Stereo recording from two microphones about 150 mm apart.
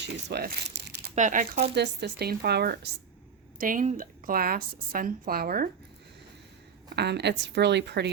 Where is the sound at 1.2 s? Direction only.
55° right (ahead or behind); by 2.9 s 90° right.